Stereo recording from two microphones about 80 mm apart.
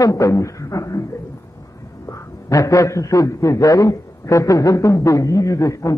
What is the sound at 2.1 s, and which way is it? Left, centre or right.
Speech, left.